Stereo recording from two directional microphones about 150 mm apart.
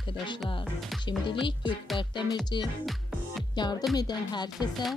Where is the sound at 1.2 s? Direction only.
30° left (ahead or behind).